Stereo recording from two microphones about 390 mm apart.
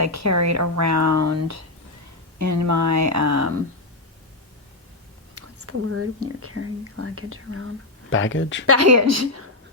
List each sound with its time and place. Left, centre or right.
0.0 s speech: right
5.3 s speech: right
8.1 s speech: left
8.6 s speech: right